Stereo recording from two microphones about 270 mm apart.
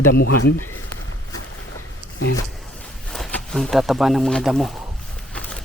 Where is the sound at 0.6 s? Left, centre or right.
Left.